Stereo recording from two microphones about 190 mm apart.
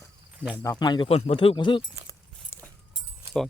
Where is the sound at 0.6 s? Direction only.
20° left (ahead or behind).